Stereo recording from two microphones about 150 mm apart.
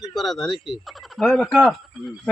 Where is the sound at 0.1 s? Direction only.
Centre (ahead or behind).